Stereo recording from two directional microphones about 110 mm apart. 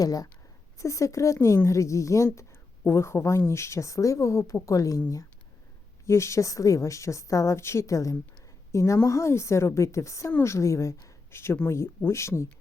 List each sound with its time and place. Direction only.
0.0 s a woman's voice: 35° left (ahead or behind)